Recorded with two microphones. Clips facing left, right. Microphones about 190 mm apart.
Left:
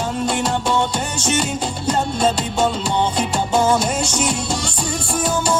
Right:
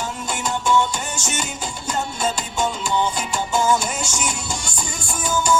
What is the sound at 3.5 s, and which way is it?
Music, 60° left (ahead or behind).